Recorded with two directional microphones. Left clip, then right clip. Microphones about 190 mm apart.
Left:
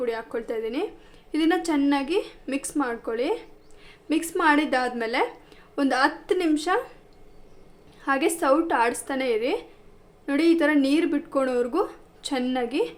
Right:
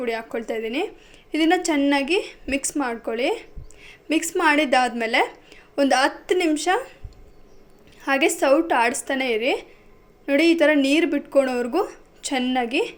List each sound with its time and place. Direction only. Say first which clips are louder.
0.0 s a woman's voice: right 2 dB; 5° right (ahead or behind)
8.0 s speech: right 3 dB; 5° right (ahead or behind)